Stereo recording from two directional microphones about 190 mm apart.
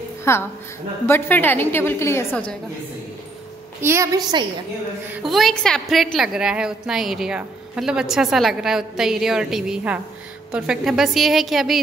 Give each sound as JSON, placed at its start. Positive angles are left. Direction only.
{"t": 0.2, "sound": "a woman's voice", "side_deg": 15}
{"t": 3.8, "sound": "a woman's voice", "side_deg": -15}
{"t": 5.1, "sound": "a woman's voice", "side_deg": 0}